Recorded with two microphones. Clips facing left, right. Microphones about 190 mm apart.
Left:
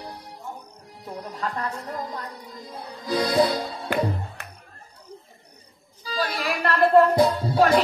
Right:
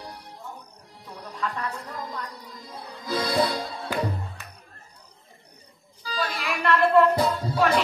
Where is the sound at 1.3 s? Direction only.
35° left (ahead or behind).